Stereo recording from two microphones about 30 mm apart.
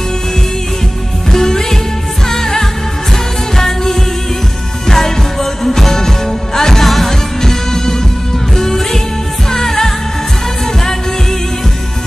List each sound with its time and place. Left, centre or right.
1.3 s music: centre